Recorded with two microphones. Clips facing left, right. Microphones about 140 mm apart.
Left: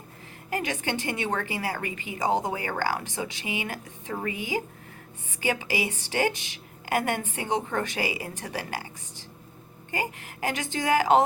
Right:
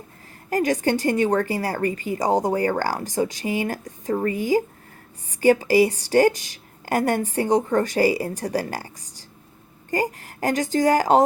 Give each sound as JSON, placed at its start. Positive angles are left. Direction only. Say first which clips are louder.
{"t": 0.5, "sound": "a woman's voice", "louder": "right 9 dB", "side_deg": -40}